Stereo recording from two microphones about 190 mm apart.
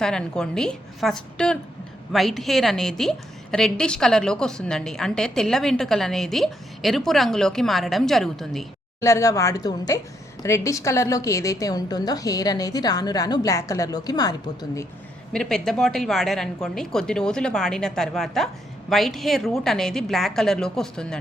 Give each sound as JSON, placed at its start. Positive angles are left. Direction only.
{"t": 0.0, "sound": "a woman's voice", "side_deg": 5}
{"t": 9.0, "sound": "a woman's voice", "side_deg": 15}
{"t": 15.3, "sound": "a woman's voice", "side_deg": 5}